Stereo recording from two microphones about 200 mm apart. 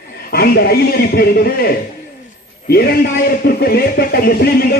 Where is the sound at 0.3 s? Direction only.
50° left (ahead or behind).